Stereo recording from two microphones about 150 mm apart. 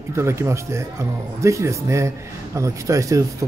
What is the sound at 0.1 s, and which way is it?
Speech, 20° right (ahead or behind).